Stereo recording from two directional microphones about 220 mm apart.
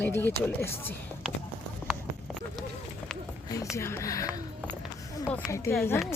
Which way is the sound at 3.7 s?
10° left (ahead or behind).